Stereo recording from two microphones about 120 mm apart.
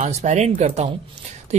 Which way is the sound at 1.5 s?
70° right (ahead or behind).